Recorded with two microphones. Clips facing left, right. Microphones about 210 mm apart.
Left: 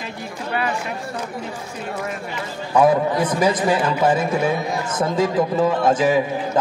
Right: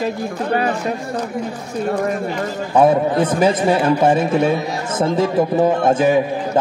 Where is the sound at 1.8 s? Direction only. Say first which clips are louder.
Right 9 dB; 45° right (ahead or behind).